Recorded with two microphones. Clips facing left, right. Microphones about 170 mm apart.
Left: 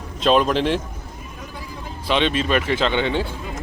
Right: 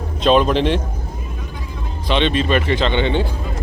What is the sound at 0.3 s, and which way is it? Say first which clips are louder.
Speech: right 3 dB; centre (ahead or behind).